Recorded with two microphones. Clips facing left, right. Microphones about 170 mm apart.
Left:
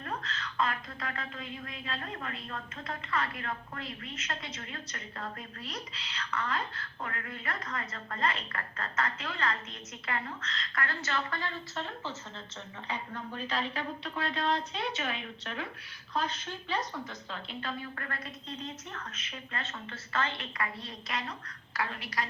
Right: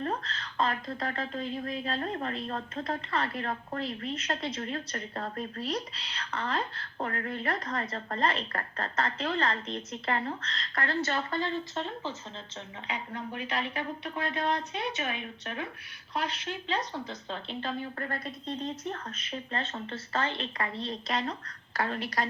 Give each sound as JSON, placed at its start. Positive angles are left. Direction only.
{"t": 0.0, "sound": "a woman's voice", "side_deg": -35}
{"t": 16.3, "sound": "speech", "side_deg": -75}
{"t": 16.9, "sound": "a woman's voice", "side_deg": -25}